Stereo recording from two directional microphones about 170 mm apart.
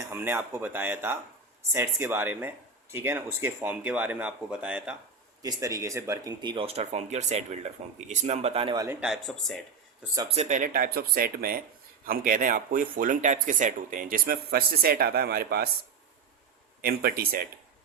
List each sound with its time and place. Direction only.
0.0 s speech: 15° right (ahead or behind)
5.4 s speech: 20° right (ahead or behind); by 8.7 s 35° right (ahead or behind)
8.7 s a man's voice: 20° right (ahead or behind)
9.0 s speech: centre (ahead or behind)
10.2 s speech: 40° right (ahead or behind)
10.6 s speech: 60° right (ahead or behind)
16.8 s speech: 65° right (ahead or behind)